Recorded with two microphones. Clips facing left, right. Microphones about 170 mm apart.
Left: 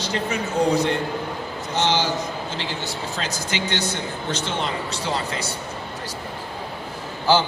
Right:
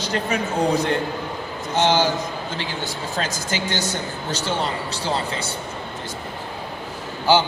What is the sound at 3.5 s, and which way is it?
A man's voice, 45° right (ahead or behind).